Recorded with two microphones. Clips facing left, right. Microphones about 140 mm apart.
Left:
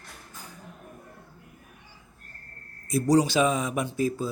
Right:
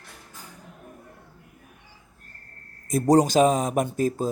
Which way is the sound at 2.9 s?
50° right (ahead or behind).